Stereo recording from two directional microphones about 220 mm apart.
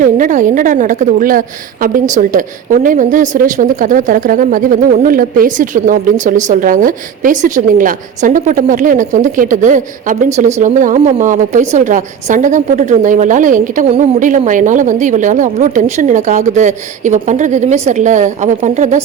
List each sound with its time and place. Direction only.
0.0 s a woman's voice: 35° right (ahead or behind)